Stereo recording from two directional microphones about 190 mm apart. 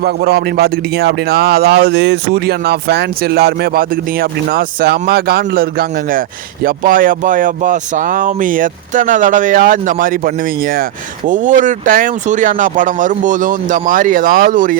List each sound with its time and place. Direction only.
0.0 s speech: 55° right (ahead or behind)
6.7 s speech: 45° right (ahead or behind)